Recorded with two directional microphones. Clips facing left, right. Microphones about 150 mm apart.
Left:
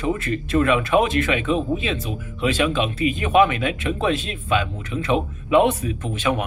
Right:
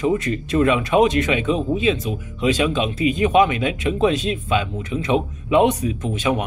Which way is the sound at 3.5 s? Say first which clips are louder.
Right 2 dB; 25° right (ahead or behind).